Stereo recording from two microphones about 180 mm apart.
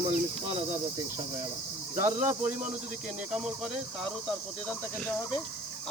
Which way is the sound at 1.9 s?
45° right (ahead or behind).